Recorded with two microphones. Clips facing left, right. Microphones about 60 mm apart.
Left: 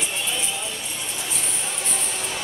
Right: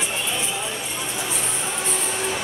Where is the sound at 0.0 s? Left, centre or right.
Centre.